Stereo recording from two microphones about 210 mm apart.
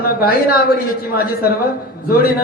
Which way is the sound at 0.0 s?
45° left (ahead or behind).